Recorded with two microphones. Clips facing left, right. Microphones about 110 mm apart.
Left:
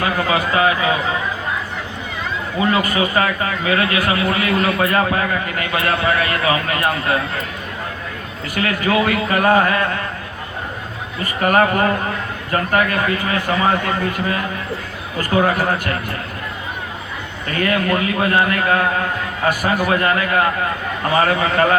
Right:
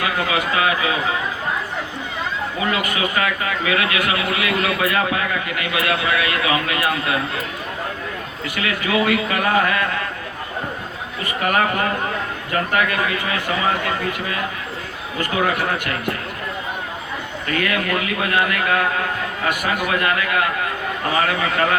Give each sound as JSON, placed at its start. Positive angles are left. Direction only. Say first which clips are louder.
{"t": 0.0, "sound": "a man's voice", "louder": "left 3 dB", "side_deg": 35}
{"t": 2.7, "sound": "a man's voice", "louder": "left 4 dB", "side_deg": 35}
{"t": 8.5, "sound": "a man's voice", "louder": "left 3 dB", "side_deg": 40}
{"t": 11.3, "sound": "a man's voice", "louder": "left 4 dB", "side_deg": 40}
{"t": 15.2, "sound": "a man's voice", "louder": "left 4 dB", "side_deg": 40}
{"t": 17.5, "sound": "a man's voice", "louder": "left 3 dB", "side_deg": 35}